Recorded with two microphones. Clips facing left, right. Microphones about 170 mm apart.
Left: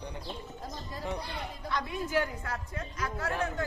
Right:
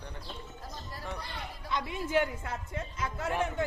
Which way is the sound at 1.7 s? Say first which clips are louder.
Right 1 dB; 20° right (ahead or behind).